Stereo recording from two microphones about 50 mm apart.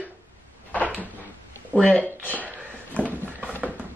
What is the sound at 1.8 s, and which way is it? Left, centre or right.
Female singing, left.